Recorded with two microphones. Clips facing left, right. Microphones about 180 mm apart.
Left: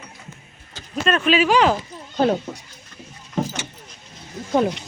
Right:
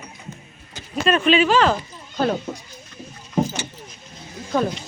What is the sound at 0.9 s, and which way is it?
Speech, 5° right (ahead or behind).